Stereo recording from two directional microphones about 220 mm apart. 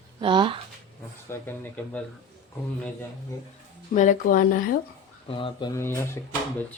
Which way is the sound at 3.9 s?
35° left (ahead or behind).